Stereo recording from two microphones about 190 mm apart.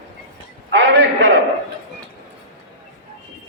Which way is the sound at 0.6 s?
75° right (ahead or behind).